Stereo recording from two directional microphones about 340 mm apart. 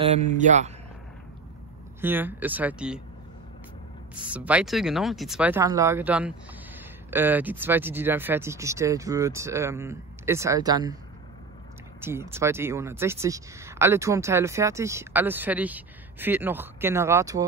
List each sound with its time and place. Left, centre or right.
0.0 s speech: centre
2.0 s speech: centre
4.1 s speech: centre
12.0 s speech: centre